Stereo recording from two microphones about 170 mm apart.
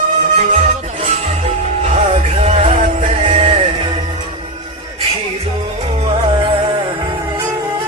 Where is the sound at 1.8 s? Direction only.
35° right (ahead or behind).